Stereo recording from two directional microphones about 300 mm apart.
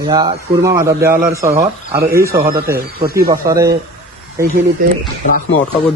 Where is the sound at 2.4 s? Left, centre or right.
Right.